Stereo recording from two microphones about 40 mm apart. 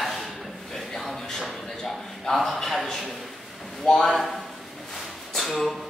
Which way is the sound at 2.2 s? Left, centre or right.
Centre.